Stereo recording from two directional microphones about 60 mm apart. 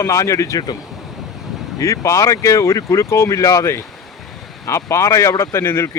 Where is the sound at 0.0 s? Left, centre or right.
Left.